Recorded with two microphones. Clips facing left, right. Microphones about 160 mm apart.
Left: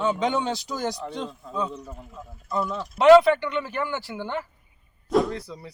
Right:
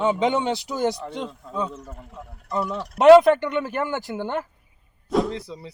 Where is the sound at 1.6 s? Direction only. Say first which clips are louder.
Even; centre (ahead or behind).